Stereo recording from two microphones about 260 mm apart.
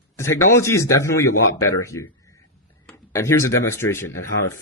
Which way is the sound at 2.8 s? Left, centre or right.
Centre.